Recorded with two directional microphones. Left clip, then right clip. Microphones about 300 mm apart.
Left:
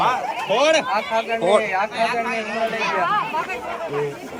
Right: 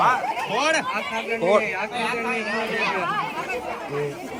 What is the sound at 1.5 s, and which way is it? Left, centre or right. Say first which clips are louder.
Speech: left 2 dB; centre.